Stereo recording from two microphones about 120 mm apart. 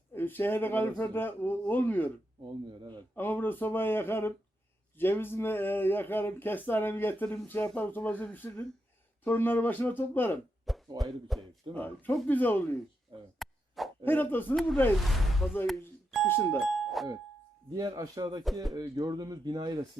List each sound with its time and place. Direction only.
0.1 s speech: 15° left (ahead or behind)
2.6 s speech: 40° right (ahead or behind)
3.2 s speech: 15° left (ahead or behind)
10.7 s speech: centre (ahead or behind)
11.7 s speech: 15° left (ahead or behind)
13.4 s plop: centre (ahead or behind)
14.0 s speech: 15° left (ahead or behind)
14.9 s speech: centre (ahead or behind)
16.2 s speech: 20° left (ahead or behind)
16.6 s doorbell: centre (ahead or behind)
17.7 s speech: 35° right (ahead or behind)